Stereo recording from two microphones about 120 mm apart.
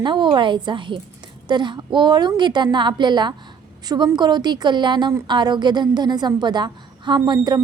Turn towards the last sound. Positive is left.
turn(degrees=-40)  # may be behind; listen again after turning